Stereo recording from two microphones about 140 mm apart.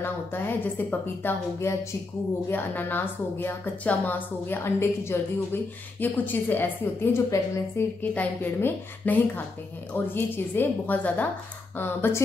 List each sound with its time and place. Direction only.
0.0 s a woman's voice: 15° left (ahead or behind)